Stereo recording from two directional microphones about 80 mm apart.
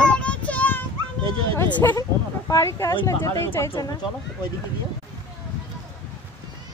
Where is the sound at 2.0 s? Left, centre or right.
Left.